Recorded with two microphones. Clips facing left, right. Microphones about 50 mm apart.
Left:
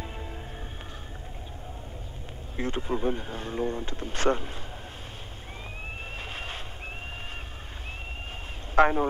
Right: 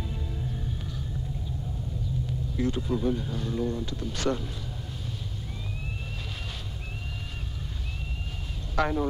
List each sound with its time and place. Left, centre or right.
2.5 s speech: left
8.7 s speech: left